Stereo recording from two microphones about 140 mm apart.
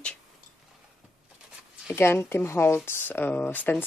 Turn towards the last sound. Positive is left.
turn(degrees=15)  # may be behind; listen again after turning